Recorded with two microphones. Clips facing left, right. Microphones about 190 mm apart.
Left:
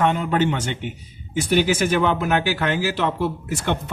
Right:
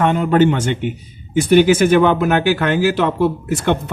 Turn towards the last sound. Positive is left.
turn(degrees=-55)  # may be behind; listen again after turning